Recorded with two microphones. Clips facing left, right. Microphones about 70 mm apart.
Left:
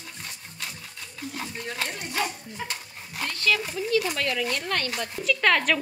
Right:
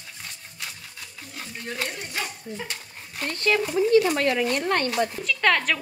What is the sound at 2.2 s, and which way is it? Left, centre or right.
Dog, centre.